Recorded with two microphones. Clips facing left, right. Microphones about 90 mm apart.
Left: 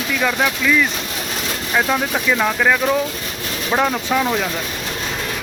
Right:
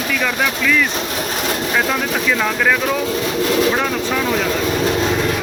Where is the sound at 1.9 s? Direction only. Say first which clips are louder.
Even; 15° left (ahead or behind).